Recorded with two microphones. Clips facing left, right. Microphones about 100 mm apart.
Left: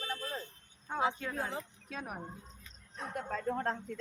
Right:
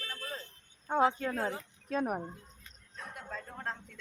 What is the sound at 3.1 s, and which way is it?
Speech, 50° left (ahead or behind).